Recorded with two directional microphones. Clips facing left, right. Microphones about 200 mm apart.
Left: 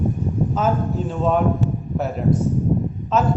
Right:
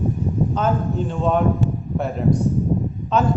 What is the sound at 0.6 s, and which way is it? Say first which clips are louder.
A man's voice: even; 5° left (ahead or behind).